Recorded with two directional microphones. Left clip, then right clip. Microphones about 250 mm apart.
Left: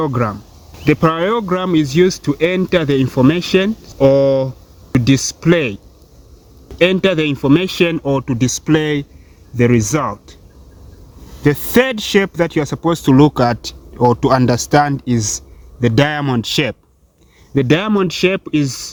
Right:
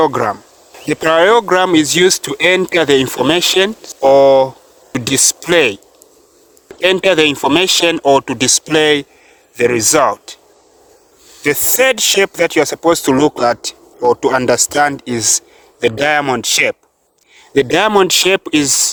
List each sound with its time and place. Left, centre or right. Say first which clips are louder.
0.0 s speech: right 6 dB; right
6.8 s speech: right 3 dB; right
11.4 s speech: right 2 dB; right
17.5 s speech: right 4 dB; right